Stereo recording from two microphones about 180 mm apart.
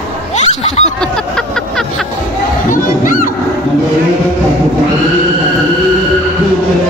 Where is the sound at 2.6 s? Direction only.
50° left (ahead or behind).